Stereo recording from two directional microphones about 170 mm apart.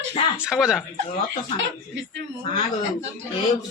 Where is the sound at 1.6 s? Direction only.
90° right.